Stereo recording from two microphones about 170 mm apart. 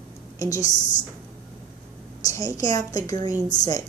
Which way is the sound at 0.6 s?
45° left (ahead or behind).